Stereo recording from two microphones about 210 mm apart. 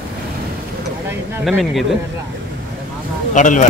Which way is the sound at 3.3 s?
35° left (ahead or behind).